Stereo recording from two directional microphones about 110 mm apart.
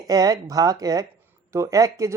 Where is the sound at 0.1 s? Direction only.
35° right (ahead or behind).